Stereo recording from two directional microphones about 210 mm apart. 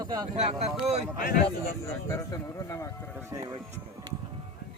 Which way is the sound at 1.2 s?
45° left (ahead or behind).